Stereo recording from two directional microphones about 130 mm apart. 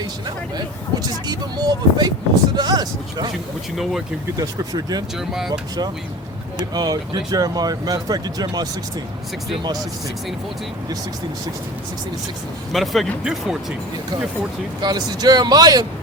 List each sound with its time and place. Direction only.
0.0 s speech: 30° right (ahead or behind)
4.4 s speech: 30° right (ahead or behind)
5.1 s speech: 5° right (ahead or behind)
5.5 s speech: 30° right (ahead or behind)
12.7 s speech: centre (ahead or behind)
14.8 s speech: 30° right (ahead or behind)